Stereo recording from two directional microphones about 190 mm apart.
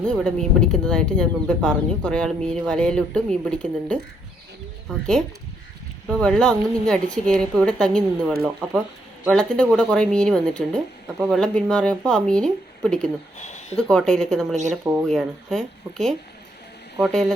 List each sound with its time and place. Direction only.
0.0 s speech: 5° left (ahead or behind)
13.5 s a sound: 35° left (ahead or behind)
13.7 s speech: 5° left (ahead or behind)
14.5 s speech: 40° right (ahead or behind)
15.0 s speech: 5° left (ahead or behind)